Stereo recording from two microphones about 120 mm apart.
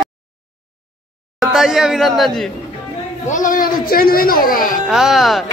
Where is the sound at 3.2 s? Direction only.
90° left.